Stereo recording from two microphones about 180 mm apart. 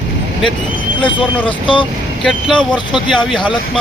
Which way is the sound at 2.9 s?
25° left (ahead or behind).